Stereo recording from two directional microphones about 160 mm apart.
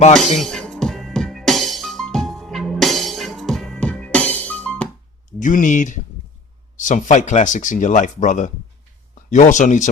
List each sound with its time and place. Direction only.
0.3 s music: 5° left (ahead or behind)
5.4 s speech: 55° left (ahead or behind)